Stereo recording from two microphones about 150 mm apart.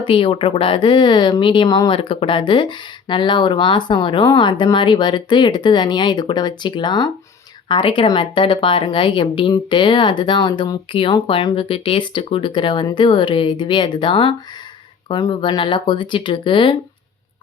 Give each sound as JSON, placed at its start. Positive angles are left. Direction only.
{"t": 0.0, "sound": "speech", "side_deg": 35}